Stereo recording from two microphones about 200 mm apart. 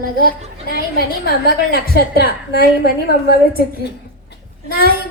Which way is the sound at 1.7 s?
50° left (ahead or behind).